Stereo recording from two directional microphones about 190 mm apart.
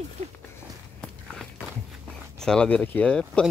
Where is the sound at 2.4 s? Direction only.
5° left (ahead or behind).